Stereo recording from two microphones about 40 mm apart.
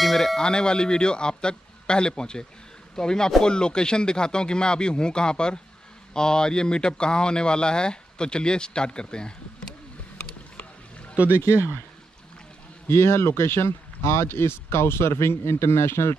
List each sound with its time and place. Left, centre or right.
0.0 s a sound: centre
0.4 s speech: left
11.2 s speech: right
12.8 s speech: left